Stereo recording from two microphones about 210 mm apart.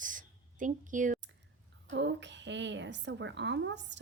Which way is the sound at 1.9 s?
60° right (ahead or behind).